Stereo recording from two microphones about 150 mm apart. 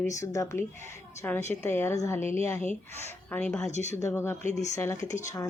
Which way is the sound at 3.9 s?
20° left (ahead or behind).